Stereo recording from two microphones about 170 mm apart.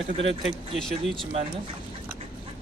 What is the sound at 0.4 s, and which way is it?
Speech, centre (ahead or behind).